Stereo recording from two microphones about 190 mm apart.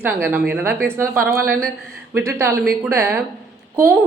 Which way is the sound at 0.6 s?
55° right (ahead or behind).